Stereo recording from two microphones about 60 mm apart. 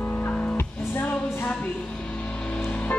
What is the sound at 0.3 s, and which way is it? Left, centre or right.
Music, left.